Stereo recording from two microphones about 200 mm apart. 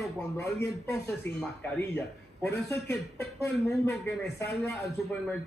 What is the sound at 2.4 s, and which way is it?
A man's voice, 10° left (ahead or behind).